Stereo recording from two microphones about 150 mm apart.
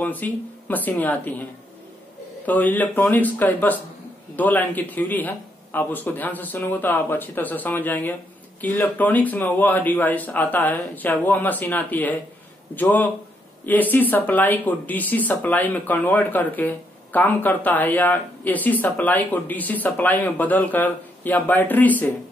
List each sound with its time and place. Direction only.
0.0 s speech: 10° left (ahead or behind)